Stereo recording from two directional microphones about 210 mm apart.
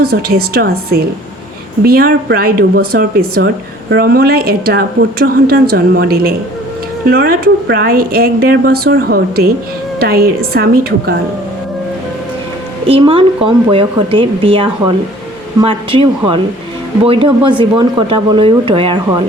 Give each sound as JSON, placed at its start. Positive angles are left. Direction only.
{"t": 0.0, "sound": "speech", "side_deg": -45}
{"t": 12.9, "sound": "speech", "side_deg": -25}